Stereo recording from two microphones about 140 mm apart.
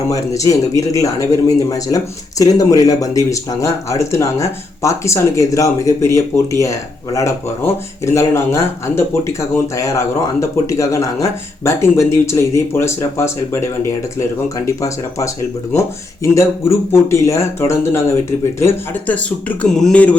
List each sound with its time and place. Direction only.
0.1 s speech: 25° left (ahead or behind)
14.8 s speech: 20° left (ahead or behind)